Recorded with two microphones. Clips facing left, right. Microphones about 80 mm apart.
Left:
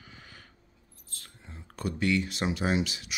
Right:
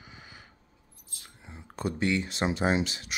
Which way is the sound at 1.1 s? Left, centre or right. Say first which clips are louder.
Right 1 dB; centre.